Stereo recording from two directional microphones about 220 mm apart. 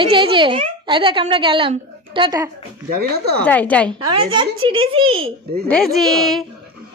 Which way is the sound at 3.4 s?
5° left (ahead or behind).